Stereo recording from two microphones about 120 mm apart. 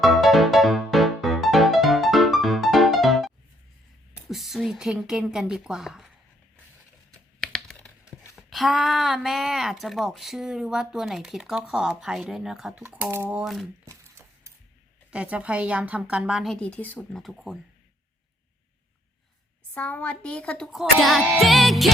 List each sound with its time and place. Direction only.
0.0 s music: centre (ahead or behind)
4.3 s speech: centre (ahead or behind)
7.1 s computer keyboard: 5° left (ahead or behind)
8.0 s a sound: 25° left (ahead or behind)
8.4 s speech: centre (ahead or behind)
13.1 s a woman's voice: 15° right (ahead or behind)
13.4 s speech: centre (ahead or behind)
13.8 s a sound: 25° right (ahead or behind)
15.1 s a woman's voice: 10° right (ahead or behind)
16.6 s speech: 10° left (ahead or behind)
19.7 s speech: 10° left (ahead or behind)